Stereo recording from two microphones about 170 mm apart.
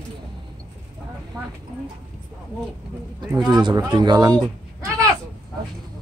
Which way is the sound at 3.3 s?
5° right (ahead or behind).